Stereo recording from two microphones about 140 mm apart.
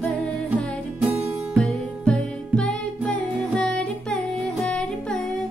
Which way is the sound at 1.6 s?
5° left (ahead or behind).